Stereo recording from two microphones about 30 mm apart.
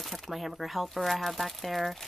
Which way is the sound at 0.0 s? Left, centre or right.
Centre.